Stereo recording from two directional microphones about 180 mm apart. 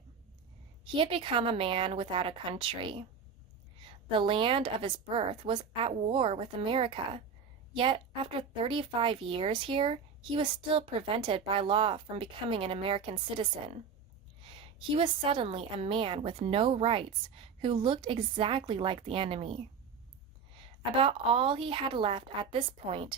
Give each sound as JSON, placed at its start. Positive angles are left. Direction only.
{"t": 0.9, "sound": "a woman's voice", "side_deg": -30}
{"t": 20.9, "sound": "a woman's voice", "side_deg": -30}